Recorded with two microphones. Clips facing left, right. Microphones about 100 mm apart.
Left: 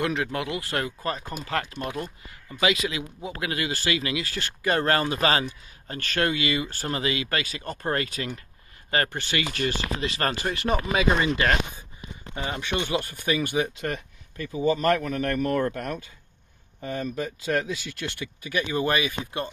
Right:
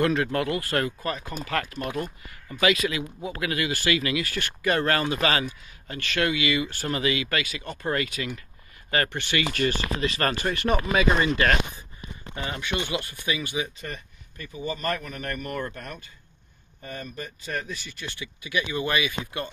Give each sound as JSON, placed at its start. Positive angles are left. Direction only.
{"t": 0.0, "sound": "speech", "side_deg": 15}
{"t": 1.0, "sound": "speech", "side_deg": 30}
{"t": 13.2, "sound": "speech", "side_deg": 50}
{"t": 13.7, "sound": "speech", "side_deg": 90}
{"t": 18.2, "sound": "speech", "side_deg": 45}